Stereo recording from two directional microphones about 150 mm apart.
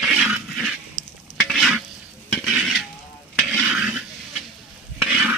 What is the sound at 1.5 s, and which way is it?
Stir, centre (ahead or behind).